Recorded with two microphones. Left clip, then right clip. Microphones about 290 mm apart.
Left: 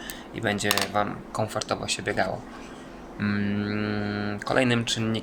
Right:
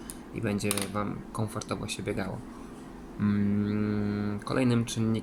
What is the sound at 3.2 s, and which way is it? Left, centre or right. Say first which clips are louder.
Speech: left 2 dB; centre.